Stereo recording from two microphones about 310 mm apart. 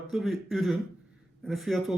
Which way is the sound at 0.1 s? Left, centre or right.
Centre.